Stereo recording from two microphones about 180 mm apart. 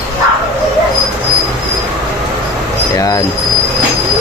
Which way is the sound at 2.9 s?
20° left (ahead or behind).